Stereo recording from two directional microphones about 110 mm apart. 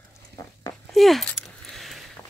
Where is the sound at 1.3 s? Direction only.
Centre (ahead or behind).